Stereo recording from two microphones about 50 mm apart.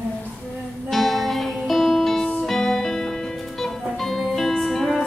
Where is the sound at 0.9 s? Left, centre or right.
Centre.